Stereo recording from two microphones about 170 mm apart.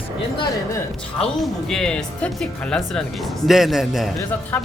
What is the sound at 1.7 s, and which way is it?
Speech, 5° left (ahead or behind).